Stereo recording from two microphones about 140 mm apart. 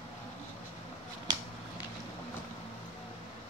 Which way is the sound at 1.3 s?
30° right (ahead or behind).